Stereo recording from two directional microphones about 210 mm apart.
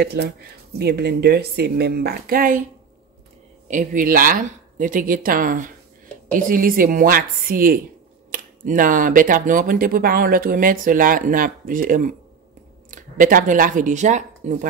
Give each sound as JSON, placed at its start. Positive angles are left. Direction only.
{"t": 0.0, "sound": "speech", "side_deg": -50}
{"t": 3.6, "sound": "speech", "side_deg": -40}